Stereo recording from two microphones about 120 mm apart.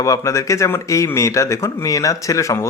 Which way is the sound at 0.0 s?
25° left (ahead or behind).